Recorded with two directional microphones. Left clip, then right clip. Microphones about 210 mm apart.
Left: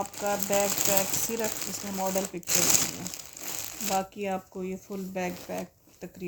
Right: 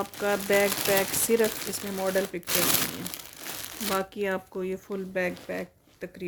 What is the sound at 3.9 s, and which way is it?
Speech, 45° right (ahead or behind).